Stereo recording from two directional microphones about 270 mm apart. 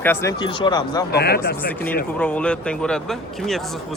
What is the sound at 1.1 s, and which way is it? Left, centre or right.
Speech, left.